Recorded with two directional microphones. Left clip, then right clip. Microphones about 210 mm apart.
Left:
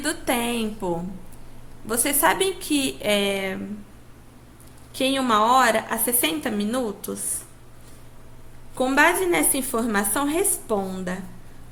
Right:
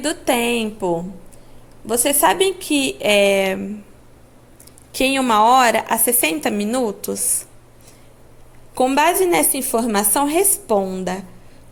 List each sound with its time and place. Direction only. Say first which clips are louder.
0.0 s a woman's voice: right 6 dB; 25° right (ahead or behind)
4.9 s a woman's voice: right 5 dB; 35° right (ahead or behind)
8.8 s a woman's voice: right 3 dB; 30° right (ahead or behind)